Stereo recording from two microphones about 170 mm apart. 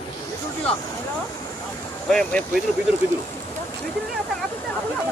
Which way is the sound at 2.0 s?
5° left (ahead or behind).